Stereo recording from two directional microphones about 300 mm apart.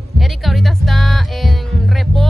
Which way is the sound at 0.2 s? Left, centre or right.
Centre.